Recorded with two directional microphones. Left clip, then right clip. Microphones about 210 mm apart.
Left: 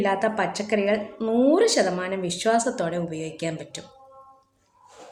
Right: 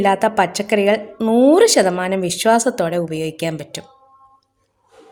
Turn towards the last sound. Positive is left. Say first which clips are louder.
# right 7 dB
turn(degrees=-45)  # may be behind; listen again after turning